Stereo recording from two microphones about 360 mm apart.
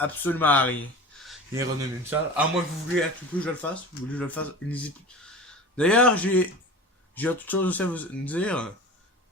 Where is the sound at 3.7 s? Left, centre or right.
Centre.